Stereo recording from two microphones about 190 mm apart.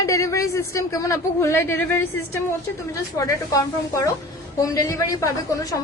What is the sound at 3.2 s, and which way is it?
A woman's voice, 15° left (ahead or behind).